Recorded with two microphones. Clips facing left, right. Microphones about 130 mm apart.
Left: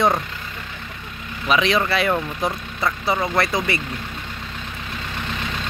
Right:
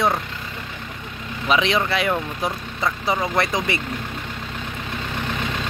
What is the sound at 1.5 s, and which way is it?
Speech, 20° right (ahead or behind).